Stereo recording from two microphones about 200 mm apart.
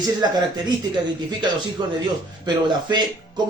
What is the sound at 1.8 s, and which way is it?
A man's voice, 20° right (ahead or behind).